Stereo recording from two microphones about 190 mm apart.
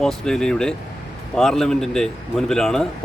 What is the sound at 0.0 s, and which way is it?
A man's voice, 5° left (ahead or behind).